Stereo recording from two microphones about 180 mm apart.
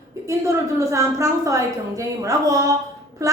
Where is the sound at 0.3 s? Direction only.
15° right (ahead or behind).